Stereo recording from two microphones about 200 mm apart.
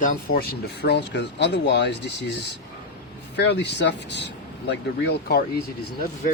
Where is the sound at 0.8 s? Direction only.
60° left (ahead or behind).